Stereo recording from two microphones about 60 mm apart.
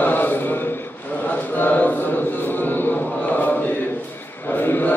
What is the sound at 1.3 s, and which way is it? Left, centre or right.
Chant, left.